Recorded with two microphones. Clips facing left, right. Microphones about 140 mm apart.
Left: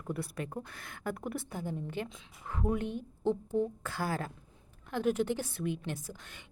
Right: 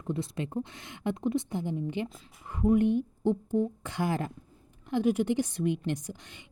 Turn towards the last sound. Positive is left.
turn(degrees=-65)  # may be behind; listen again after turning